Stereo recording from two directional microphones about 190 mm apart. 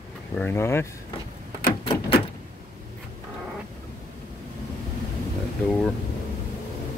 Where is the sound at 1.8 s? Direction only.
30° left (ahead or behind).